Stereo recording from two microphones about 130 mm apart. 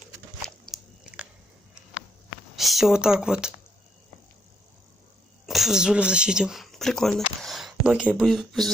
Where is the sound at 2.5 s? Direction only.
Centre (ahead or behind).